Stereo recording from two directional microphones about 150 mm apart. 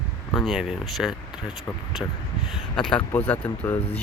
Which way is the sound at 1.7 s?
15° left (ahead or behind).